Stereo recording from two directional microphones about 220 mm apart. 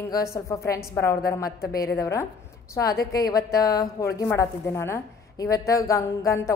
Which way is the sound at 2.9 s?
45° left (ahead or behind).